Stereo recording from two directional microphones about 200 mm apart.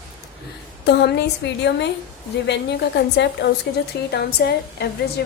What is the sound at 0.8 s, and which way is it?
Speech, 55° left (ahead or behind).